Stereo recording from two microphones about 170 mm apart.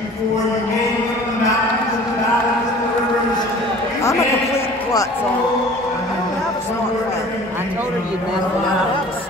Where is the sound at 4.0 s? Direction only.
15° left (ahead or behind).